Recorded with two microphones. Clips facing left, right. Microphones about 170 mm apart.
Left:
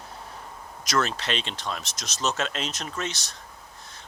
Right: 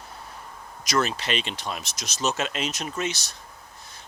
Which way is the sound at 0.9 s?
5° right (ahead or behind).